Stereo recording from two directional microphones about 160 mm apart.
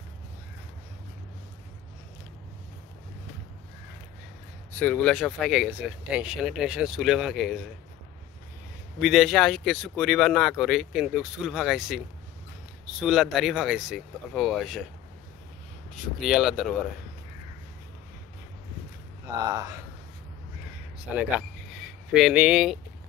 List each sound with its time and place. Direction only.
4.7 s speech: 10° left (ahead or behind)
9.0 s speech: centre (ahead or behind)
13.0 s speech: centre (ahead or behind)
16.2 s speech: centre (ahead or behind)
19.2 s speech: 20° right (ahead or behind)
21.0 s speech: 10° right (ahead or behind)